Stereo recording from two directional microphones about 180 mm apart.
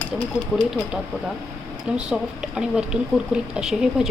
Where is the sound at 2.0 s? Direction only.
5° right (ahead or behind).